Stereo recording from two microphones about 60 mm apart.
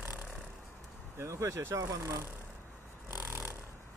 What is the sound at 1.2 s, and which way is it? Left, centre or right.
Speech, right.